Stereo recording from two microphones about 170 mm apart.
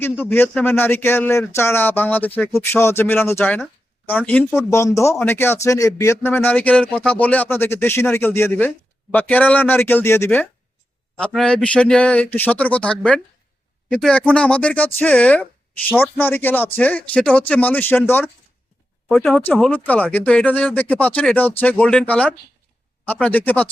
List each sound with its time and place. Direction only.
0.0 s speech: 15° left (ahead or behind)